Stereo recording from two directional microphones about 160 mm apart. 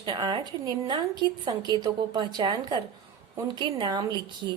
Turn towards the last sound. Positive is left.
turn(degrees=-30)  # may be behind; listen again after turning